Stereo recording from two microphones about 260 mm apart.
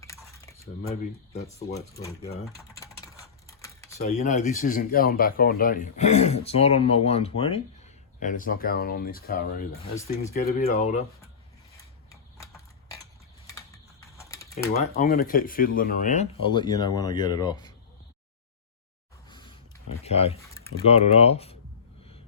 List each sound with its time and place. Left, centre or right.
0.1 s a sound: centre
0.8 s speech: left
2.4 s typing: centre
3.9 s speech: left
13.5 s typing: centre
14.8 s speech: left
19.3 s a sound: centre
20.1 s speech: left
20.4 s typing: centre
20.8 s speech: left